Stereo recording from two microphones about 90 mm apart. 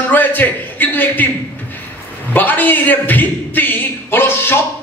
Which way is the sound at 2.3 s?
20° left (ahead or behind).